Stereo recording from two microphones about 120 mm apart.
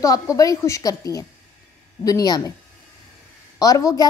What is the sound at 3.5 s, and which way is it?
Speech, 30° left (ahead or behind).